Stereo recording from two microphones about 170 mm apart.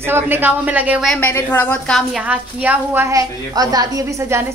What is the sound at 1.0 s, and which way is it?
A woman's voice, 10° left (ahead or behind).